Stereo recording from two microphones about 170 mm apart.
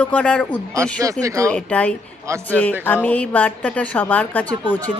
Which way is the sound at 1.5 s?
10° left (ahead or behind).